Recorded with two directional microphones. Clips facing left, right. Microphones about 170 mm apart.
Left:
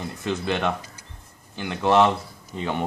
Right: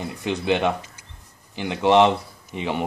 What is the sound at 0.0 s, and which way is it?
Speech, 15° right (ahead or behind).